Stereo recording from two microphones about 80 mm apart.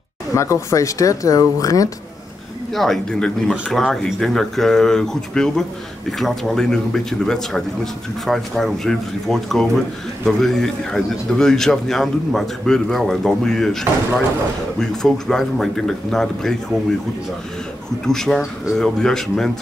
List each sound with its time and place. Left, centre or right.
0.3 s speech: left
2.7 s speech: centre
18.0 s speech: centre